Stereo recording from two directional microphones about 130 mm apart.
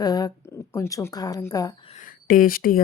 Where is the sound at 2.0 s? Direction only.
90° left.